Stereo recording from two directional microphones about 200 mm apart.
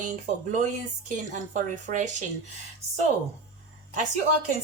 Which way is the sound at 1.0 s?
40° right (ahead or behind).